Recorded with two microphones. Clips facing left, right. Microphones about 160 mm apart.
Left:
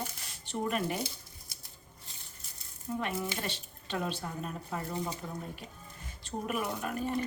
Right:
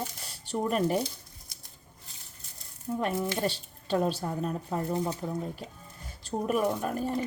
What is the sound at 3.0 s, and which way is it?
A woman's voice, 40° right (ahead or behind).